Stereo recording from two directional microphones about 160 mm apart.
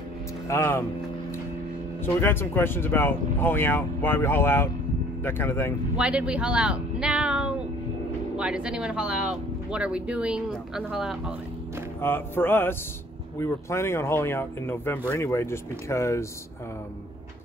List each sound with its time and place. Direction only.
0.5 s speech: 15° left (ahead or behind)
2.1 s speech: 15° left (ahead or behind)
5.9 s a sound: 5° right (ahead or behind)
8.4 s speech: 5° right (ahead or behind)
12.0 s speech: 15° left (ahead or behind)